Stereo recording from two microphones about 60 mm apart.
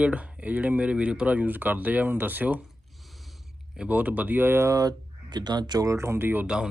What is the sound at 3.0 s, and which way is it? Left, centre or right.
Mechanisms, centre.